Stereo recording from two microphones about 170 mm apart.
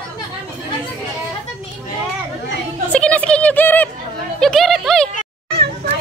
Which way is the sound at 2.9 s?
5° left (ahead or behind).